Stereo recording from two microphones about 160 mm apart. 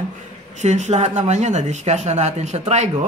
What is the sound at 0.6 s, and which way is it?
Speech, 45° right (ahead or behind).